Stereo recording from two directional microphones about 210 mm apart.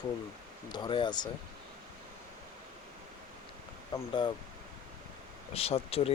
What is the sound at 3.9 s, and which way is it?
Speech, 25° left (ahead or behind).